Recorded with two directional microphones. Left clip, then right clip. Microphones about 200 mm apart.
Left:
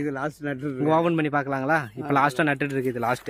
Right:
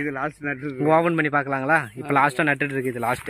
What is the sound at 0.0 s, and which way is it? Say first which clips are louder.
Speech: right 2 dB; 40° left (ahead or behind).